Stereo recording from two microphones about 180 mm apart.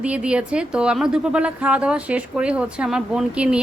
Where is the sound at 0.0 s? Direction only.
5° right (ahead or behind).